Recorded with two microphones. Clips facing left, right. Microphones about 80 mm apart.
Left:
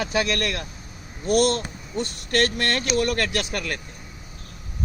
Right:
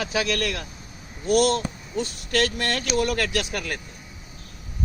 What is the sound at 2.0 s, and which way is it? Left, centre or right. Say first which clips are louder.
Speech: left 1 dB; left.